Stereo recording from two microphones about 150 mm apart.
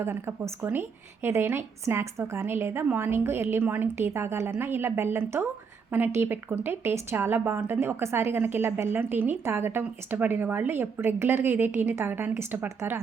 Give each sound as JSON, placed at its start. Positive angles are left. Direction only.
{"t": 0.0, "sound": "a woman's voice", "side_deg": -15}